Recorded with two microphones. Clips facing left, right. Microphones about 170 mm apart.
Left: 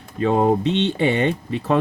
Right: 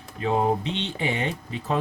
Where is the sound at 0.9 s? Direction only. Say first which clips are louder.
Left 8 dB; 70° left (ahead or behind).